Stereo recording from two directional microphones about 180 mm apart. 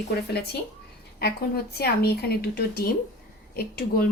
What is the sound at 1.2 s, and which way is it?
A woman's voice, 60° left (ahead or behind).